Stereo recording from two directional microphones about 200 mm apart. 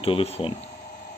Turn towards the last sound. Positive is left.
turn(degrees=30)  # may be behind; listen again after turning